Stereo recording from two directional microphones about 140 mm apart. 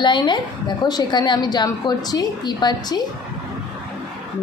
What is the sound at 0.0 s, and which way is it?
A woman's voice, 35° left (ahead or behind).